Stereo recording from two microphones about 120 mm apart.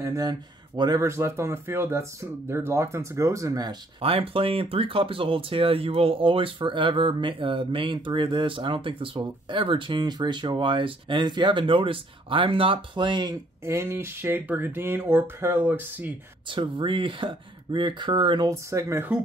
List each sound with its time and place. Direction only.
0.0 s speech: 30° right (ahead or behind)
1.0 s speech: 20° right (ahead or behind)
4.0 s speech: 50° right (ahead or behind)
13.7 s speech: 20° right (ahead or behind)
16.4 s speech: 45° right (ahead or behind)
18.5 s speech: 25° right (ahead or behind)